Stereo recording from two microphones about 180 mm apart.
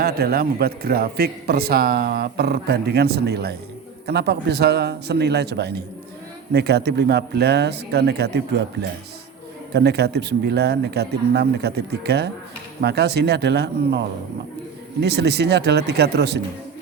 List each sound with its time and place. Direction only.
0.0 s a man's voice: 60° right (ahead or behind)
15.0 s speech: 65° right (ahead or behind)